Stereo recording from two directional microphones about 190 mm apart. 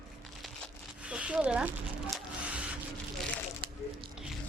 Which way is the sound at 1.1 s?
5° right (ahead or behind).